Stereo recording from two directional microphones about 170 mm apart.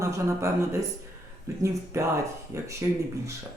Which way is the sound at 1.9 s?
15° right (ahead or behind).